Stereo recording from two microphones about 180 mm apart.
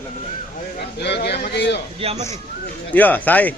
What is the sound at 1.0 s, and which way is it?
Speech, 70° left (ahead or behind).